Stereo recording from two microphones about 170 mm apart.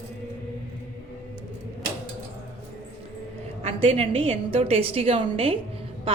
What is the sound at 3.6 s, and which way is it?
A woman's voice, 35° right (ahead or behind).